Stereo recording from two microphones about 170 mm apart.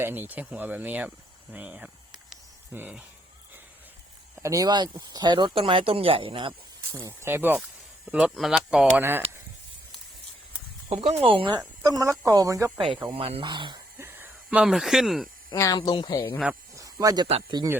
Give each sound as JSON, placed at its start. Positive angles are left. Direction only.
{"t": 0.0, "sound": "speech", "side_deg": -10}
{"t": 1.5, "sound": "snake", "side_deg": -10}
{"t": 4.4, "sound": "speech", "side_deg": -20}
{"t": 6.9, "sound": "speech", "side_deg": -15}
{"t": 9.0, "sound": "speech", "side_deg": -15}
{"t": 10.8, "sound": "speech", "side_deg": -35}
{"t": 11.6, "sound": "speech", "side_deg": -20}
{"t": 13.1, "sound": "speech", "side_deg": -35}
{"t": 14.0, "sound": "a sound", "side_deg": -10}
{"t": 15.5, "sound": "speech", "side_deg": 20}
{"t": 16.7, "sound": "snake", "side_deg": -20}
{"t": 17.2, "sound": "speech", "side_deg": -35}